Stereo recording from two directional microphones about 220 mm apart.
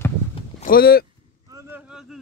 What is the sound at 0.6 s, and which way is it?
Speech, 40° left (ahead or behind).